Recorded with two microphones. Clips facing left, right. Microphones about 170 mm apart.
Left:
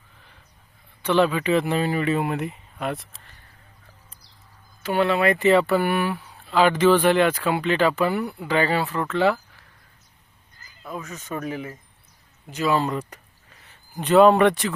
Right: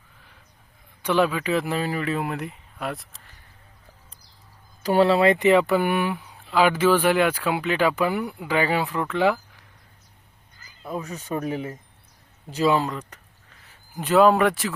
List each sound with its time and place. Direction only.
1.0 s speech: 10° right (ahead or behind)
4.8 s speech: 35° right (ahead or behind); by 9.6 s 15° right (ahead or behind)
10.8 s speech: 30° right (ahead or behind)
12.9 s speech: 10° left (ahead or behind)
13.7 s speech: centre (ahead or behind)